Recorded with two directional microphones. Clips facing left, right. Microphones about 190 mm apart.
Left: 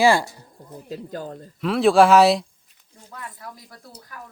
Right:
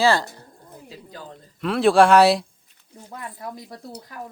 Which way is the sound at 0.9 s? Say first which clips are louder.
Left 9 dB; 50° left (ahead or behind).